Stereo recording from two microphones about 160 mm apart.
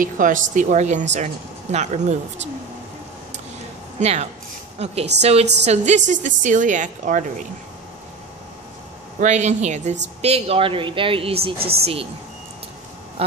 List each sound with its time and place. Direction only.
0.0 s speech: 55° right (ahead or behind)
4.0 s a woman's voice: 40° right (ahead or behind)
9.2 s speech: 50° right (ahead or behind)
11.5 s speech: 75° right (ahead or behind)
11.8 s speech: 35° right (ahead or behind)